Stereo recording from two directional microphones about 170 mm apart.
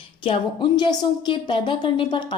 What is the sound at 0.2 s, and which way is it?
A woman's voice, 30° left (ahead or behind).